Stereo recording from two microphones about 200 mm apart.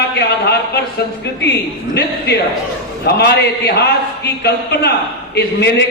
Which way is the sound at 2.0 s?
55° left (ahead or behind).